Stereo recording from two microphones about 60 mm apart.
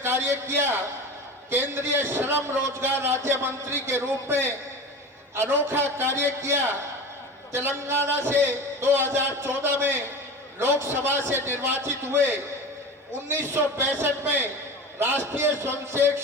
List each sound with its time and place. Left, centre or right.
0.0 s a man's voice: right